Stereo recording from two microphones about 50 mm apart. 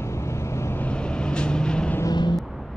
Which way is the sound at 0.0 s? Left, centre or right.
Left.